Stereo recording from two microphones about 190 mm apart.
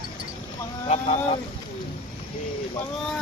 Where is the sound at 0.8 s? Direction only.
35° left (ahead or behind).